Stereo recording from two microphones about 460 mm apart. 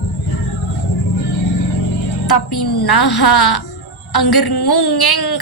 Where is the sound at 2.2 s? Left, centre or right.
Left.